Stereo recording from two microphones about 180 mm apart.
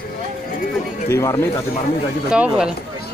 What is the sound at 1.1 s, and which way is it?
Speech, 15° left (ahead or behind).